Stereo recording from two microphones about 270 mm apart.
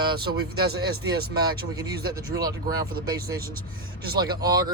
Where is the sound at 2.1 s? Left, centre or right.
Centre.